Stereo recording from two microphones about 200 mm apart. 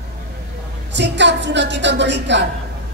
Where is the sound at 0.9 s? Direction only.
60° right (ahead or behind).